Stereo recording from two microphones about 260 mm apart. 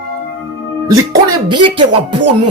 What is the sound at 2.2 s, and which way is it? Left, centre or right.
Music, right.